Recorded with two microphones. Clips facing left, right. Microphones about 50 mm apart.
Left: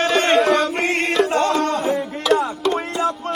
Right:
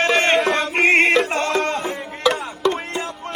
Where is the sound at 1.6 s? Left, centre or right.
Right.